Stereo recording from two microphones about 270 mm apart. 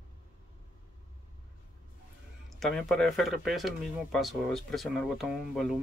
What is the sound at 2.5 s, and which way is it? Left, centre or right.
Speech, centre.